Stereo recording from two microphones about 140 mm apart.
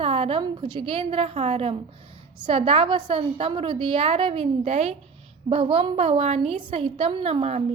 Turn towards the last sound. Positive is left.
turn(degrees=-45)  # may be behind; listen again after turning